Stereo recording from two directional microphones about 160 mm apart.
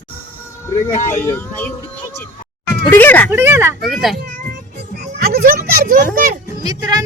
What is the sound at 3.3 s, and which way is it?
Speech, 15° right (ahead or behind).